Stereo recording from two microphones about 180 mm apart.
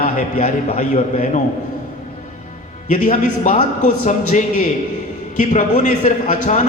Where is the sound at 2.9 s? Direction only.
45° left (ahead or behind).